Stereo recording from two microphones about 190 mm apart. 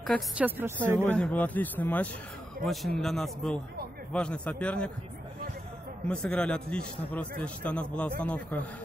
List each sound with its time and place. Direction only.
0.4 s a woman's voice: 10° right (ahead or behind)
1.0 s a man's voice: 5° left (ahead or behind)
6.0 s a man's voice: 5° left (ahead or behind)